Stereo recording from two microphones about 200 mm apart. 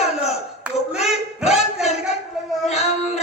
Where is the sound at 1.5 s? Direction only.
35° left (ahead or behind).